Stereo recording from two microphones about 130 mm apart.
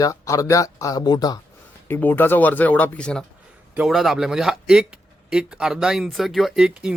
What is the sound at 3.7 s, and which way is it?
Speech, 5° right (ahead or behind).